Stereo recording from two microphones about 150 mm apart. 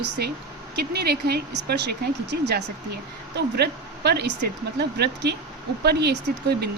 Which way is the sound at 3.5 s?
90° right.